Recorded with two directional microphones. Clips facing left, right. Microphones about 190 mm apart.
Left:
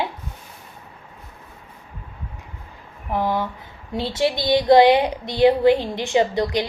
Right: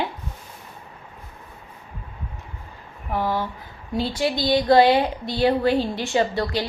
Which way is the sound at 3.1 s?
20° left (ahead or behind).